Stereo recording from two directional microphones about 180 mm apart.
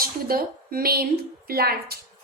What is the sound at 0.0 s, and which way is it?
A woman's voice, 55° right (ahead or behind).